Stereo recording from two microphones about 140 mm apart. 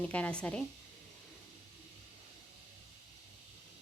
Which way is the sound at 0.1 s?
10° left (ahead or behind).